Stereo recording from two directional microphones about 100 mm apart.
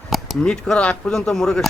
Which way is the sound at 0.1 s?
Centre (ahead or behind).